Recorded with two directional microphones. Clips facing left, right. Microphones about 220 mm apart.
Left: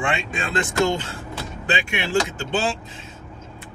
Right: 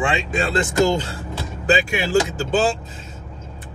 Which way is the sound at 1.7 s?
40° right (ahead or behind).